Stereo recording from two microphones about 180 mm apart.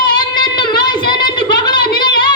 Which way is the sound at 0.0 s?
25° left (ahead or behind).